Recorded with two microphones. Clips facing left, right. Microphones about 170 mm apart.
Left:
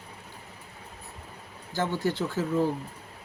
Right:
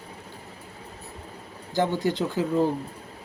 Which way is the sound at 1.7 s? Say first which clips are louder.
Right 4 dB; 15° right (ahead or behind).